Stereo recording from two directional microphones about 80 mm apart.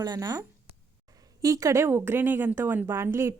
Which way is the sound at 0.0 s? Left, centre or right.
Right.